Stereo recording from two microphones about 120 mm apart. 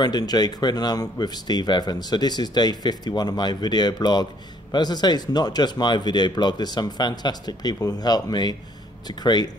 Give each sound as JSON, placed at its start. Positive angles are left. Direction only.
{"t": 0.0, "sound": "speech", "side_deg": 35}